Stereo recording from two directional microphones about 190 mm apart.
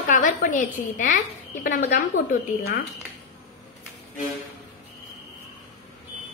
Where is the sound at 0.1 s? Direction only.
45° left (ahead or behind).